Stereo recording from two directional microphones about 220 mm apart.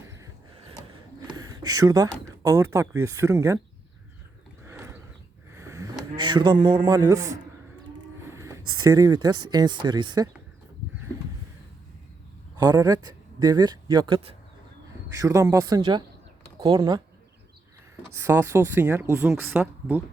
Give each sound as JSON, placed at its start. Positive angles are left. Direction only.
{"t": 1.3, "sound": "a sound", "side_deg": -15}
{"t": 2.7, "sound": "speech", "side_deg": -15}
{"t": 4.6, "sound": "a sound", "side_deg": -10}
{"t": 6.1, "sound": "a man's voice", "side_deg": -20}
{"t": 8.3, "sound": "a sound", "side_deg": -15}
{"t": 8.8, "sound": "a man's voice", "side_deg": -15}
{"t": 12.5, "sound": "speech", "side_deg": -15}
{"t": 15.1, "sound": "a man's voice", "side_deg": -15}
{"t": 18.1, "sound": "speech", "side_deg": -15}